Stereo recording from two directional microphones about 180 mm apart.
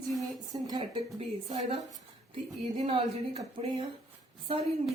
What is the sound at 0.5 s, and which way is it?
A woman's voice, 20° right (ahead or behind).